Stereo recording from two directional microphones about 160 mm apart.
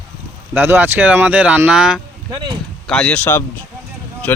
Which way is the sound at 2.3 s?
25° right (ahead or behind).